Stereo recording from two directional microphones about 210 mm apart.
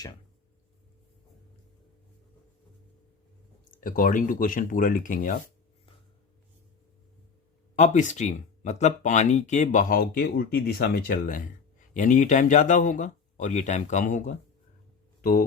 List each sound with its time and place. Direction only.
3.8 s speech: 40° left (ahead or behind)
7.8 s speech: 35° left (ahead or behind)